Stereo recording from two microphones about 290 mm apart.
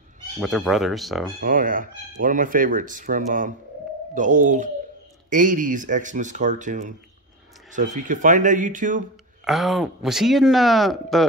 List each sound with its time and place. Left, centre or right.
0.4 s speech: centre
1.4 s speech: right
9.4 s speech: centre